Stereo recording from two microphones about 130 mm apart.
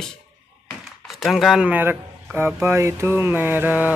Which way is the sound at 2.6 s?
20° right (ahead or behind).